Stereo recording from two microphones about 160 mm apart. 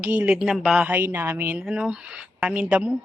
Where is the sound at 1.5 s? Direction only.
5° right (ahead or behind).